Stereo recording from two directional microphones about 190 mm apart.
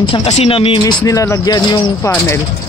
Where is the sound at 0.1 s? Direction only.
30° left (ahead or behind).